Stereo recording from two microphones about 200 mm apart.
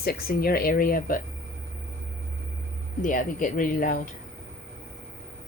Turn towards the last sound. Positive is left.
turn(degrees=45)  # may be behind; listen again after turning